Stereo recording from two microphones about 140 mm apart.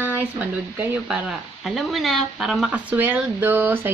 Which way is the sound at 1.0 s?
Centre (ahead or behind).